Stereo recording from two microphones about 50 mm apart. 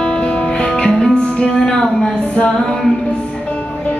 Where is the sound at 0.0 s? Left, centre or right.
Centre.